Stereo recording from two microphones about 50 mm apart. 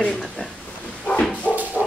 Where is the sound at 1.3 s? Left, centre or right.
Left.